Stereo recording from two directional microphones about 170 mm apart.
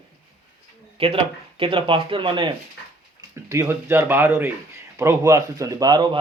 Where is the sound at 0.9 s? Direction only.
35° right (ahead or behind).